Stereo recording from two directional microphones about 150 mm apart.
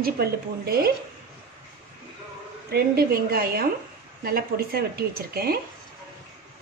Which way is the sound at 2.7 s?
90° right.